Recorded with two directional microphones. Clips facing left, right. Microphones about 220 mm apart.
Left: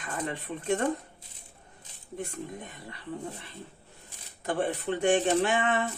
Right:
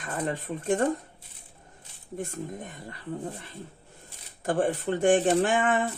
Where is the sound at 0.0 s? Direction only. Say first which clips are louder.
Right 3 dB; 45° right (ahead or behind).